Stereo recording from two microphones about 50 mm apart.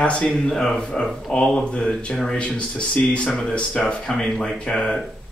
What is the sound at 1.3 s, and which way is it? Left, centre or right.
Speech, centre.